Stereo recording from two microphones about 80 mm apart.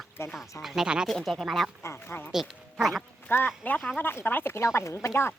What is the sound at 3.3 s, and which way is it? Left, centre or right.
Speech, left.